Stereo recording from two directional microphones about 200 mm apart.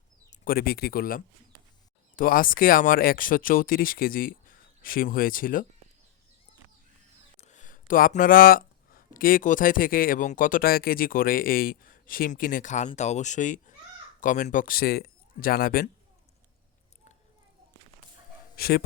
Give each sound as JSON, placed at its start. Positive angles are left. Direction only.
{"t": 0.3, "sound": "speech", "side_deg": 45}
{"t": 7.4, "sound": "speech", "side_deg": 40}
{"t": 18.5, "sound": "speech", "side_deg": 50}